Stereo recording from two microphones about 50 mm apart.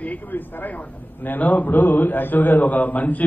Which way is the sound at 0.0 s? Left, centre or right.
Left.